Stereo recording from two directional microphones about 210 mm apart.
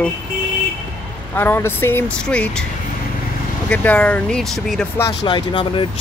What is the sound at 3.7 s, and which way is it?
Speech, 5° left (ahead or behind).